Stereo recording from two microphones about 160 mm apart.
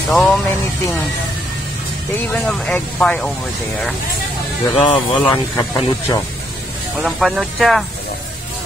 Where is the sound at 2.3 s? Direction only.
Centre (ahead or behind).